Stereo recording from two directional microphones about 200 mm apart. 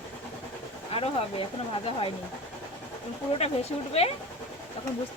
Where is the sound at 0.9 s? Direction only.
30° left (ahead or behind).